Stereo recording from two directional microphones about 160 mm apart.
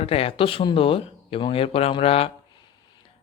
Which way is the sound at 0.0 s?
40° left (ahead or behind).